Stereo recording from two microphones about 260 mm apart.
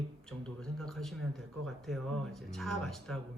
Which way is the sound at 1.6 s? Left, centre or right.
Centre.